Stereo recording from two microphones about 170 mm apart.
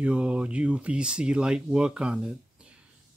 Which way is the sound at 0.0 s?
5° right (ahead or behind).